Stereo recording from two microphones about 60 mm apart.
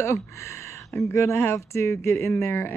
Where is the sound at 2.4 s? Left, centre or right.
Left.